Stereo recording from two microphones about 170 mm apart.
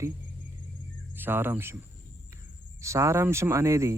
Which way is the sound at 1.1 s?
10° right (ahead or behind).